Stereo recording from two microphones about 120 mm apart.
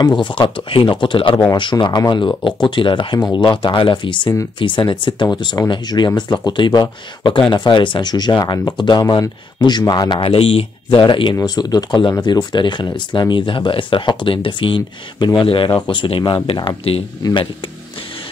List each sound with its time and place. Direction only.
0.0 s speech: 40° left (ahead or behind)
10.2 s speech: 50° left (ahead or behind)
17.2 s speech: 40° left (ahead or behind)